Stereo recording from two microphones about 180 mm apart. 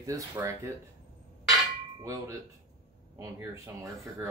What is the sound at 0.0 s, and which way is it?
Speech, 20° right (ahead or behind).